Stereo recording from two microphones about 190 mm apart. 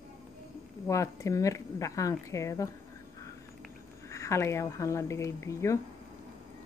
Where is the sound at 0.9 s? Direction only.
15° left (ahead or behind).